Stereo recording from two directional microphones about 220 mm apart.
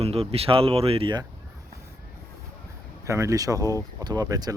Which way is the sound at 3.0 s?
15° right (ahead or behind).